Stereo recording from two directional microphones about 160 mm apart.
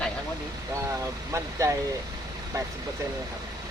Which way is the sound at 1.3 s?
20° right (ahead or behind).